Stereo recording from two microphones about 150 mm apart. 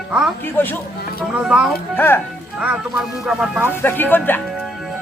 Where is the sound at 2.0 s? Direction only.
15° left (ahead or behind).